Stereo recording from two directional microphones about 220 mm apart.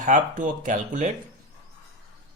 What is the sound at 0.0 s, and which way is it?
Speech, 35° right (ahead or behind).